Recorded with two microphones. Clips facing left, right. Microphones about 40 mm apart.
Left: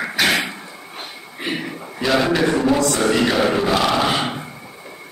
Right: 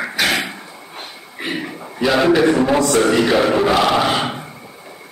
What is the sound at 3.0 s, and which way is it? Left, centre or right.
Speech, centre.